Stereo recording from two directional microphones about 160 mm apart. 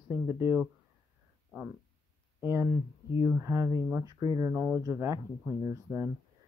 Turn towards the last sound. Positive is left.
turn(degrees=-20)  # may be behind; listen again after turning